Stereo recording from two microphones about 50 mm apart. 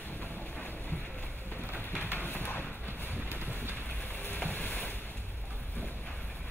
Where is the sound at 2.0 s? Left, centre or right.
Left.